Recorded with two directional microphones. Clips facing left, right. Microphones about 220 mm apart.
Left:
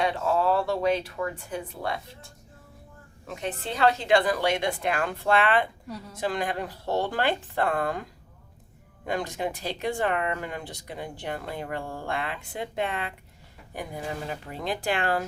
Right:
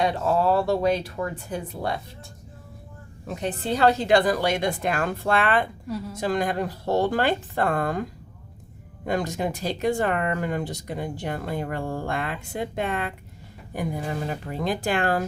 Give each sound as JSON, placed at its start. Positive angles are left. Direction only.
{"t": 0.0, "sound": "a woman's voice", "side_deg": -40}
{"t": 3.2, "sound": "a woman's voice", "side_deg": -35}
{"t": 9.0, "sound": "speech", "side_deg": -45}
{"t": 14.5, "sound": "speech", "side_deg": -45}